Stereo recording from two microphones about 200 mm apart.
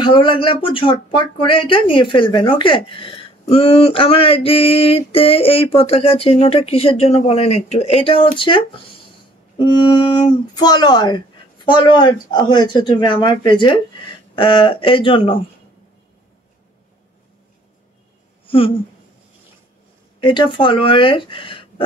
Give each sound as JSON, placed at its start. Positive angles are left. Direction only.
{"t": 0.0, "sound": "speech", "side_deg": 25}
{"t": 20.2, "sound": "speech", "side_deg": 25}